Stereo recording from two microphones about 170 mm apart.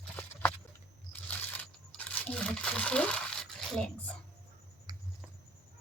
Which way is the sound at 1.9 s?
5° left (ahead or behind).